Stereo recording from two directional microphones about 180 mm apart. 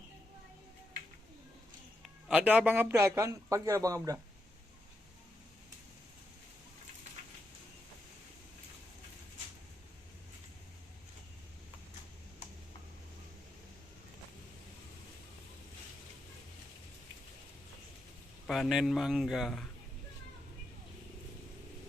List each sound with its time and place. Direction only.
2.2 s a man's voice: 5° right (ahead or behind)
18.4 s speech: centre (ahead or behind)